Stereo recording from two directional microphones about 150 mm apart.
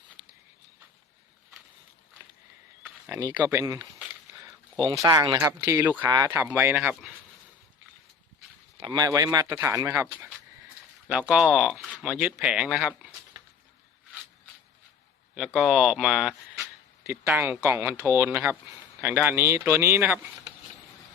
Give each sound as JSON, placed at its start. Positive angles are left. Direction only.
{"t": 2.8, "sound": "a sound", "side_deg": -20}
{"t": 3.3, "sound": "speech", "side_deg": -10}
{"t": 3.6, "sound": "speech", "side_deg": -25}
{"t": 4.4, "sound": "a sound", "side_deg": -20}
{"t": 5.0, "sound": "speech", "side_deg": -25}
{"t": 8.9, "sound": "speech", "side_deg": -25}
{"t": 15.4, "sound": "speech", "side_deg": -5}